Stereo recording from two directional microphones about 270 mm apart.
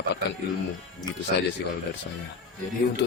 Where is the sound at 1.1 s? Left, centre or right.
Centre.